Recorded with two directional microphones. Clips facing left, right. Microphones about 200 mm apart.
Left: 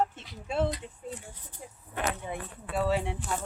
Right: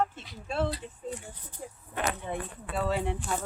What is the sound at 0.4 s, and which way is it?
Speech, 15° left (ahead or behind).